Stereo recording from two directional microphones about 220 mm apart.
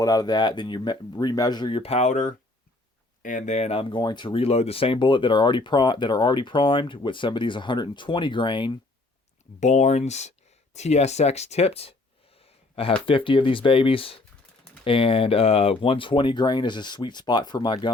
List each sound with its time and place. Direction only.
0.0 s speech: 15° left (ahead or behind)
9.6 s speech: 30° left (ahead or behind)